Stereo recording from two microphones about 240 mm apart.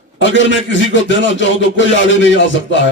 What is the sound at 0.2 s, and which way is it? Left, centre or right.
A man's voice, left.